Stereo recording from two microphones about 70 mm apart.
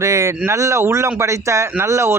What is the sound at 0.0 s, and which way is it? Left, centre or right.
Speech, right.